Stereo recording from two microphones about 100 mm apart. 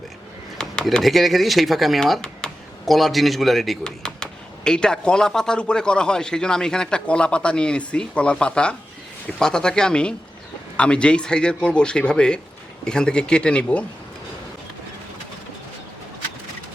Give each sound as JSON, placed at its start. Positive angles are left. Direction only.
{"t": 0.6, "sound": "speech", "side_deg": 10}